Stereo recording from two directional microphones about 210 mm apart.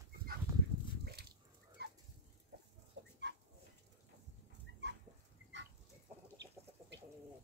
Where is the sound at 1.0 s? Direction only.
50° right (ahead or behind).